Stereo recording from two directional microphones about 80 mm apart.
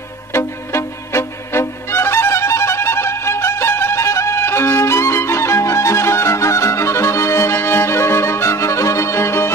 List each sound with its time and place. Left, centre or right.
0.3 s music: left